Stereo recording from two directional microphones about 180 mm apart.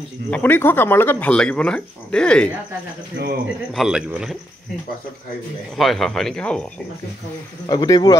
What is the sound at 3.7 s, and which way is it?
Speech, 5° right (ahead or behind).